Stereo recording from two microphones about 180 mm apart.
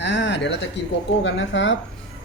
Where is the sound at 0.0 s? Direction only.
75° left (ahead or behind).